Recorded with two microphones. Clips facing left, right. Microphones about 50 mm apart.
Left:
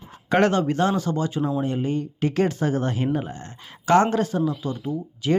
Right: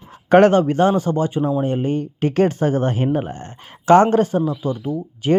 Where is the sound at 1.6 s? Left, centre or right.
Right.